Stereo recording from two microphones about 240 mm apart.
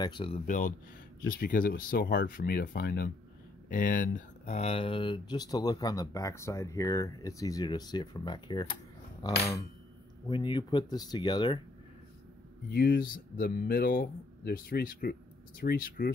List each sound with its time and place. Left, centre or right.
0.0 s speech: left
12.7 s speech: left